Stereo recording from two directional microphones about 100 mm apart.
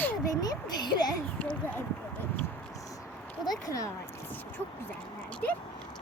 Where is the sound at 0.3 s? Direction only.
40° left (ahead or behind).